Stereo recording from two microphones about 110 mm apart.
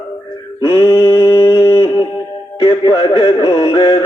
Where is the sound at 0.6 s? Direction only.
30° left (ahead or behind).